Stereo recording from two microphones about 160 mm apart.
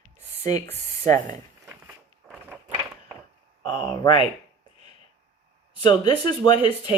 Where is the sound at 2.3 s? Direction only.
10° right (ahead or behind).